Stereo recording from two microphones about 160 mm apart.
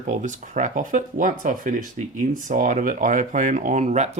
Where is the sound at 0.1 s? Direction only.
50° right (ahead or behind).